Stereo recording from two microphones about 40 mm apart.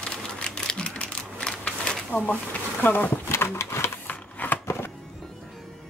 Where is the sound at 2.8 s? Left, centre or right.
Left.